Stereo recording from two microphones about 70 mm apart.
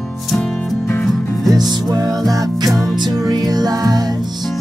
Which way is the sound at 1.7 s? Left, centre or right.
Right.